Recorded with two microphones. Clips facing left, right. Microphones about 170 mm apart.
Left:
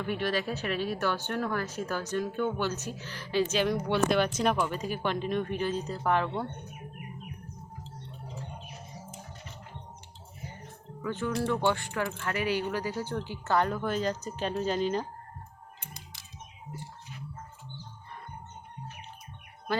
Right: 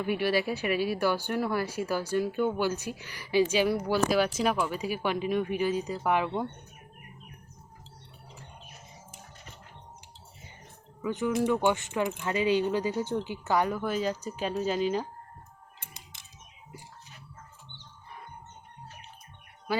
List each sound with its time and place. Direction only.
0.0 s speech: 10° right (ahead or behind)
11.0 s speech: 15° right (ahead or behind)